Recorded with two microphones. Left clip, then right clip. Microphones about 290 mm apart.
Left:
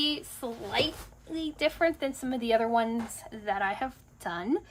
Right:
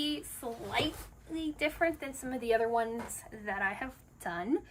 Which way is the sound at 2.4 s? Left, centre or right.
Centre.